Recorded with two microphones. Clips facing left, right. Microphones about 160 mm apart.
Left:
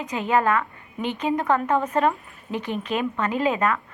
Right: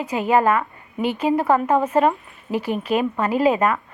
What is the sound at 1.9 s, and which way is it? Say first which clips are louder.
Speech: right 4 dB; 5° right (ahead or behind).